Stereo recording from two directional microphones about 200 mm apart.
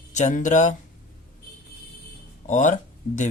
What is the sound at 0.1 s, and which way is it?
Speech, 35° left (ahead or behind).